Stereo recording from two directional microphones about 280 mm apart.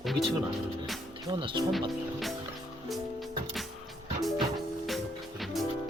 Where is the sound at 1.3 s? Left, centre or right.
Centre.